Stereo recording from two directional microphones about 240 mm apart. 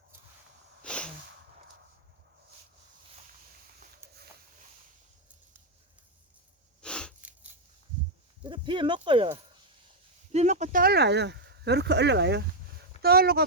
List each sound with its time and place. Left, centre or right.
0.8 s sneeze: centre
6.8 s a sound: centre
8.4 s speech: right